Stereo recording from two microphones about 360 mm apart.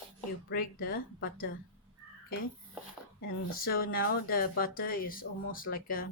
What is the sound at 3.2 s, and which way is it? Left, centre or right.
Speech, left.